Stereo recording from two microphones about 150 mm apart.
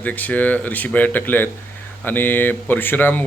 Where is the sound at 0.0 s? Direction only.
10° left (ahead or behind).